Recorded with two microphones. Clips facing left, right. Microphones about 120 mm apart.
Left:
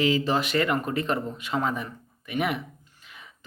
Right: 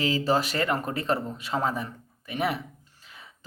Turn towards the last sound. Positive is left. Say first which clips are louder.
# left 1 dB
turn(degrees=-35)  # may be behind; listen again after turning